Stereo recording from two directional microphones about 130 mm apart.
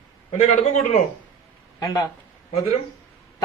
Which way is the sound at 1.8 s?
30° left (ahead or behind).